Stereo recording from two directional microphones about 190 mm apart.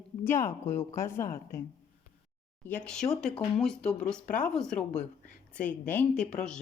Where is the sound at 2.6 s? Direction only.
5° left (ahead or behind).